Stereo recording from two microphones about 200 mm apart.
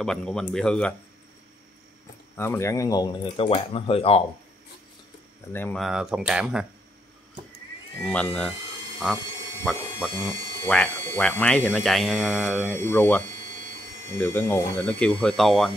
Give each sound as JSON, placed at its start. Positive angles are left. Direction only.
{"t": 0.0, "sound": "speech", "side_deg": 5}
{"t": 2.3, "sound": "speech", "side_deg": 10}
{"t": 5.5, "sound": "speech", "side_deg": 10}
{"t": 8.0, "sound": "speech", "side_deg": 5}
{"t": 12.7, "sound": "speech", "side_deg": 10}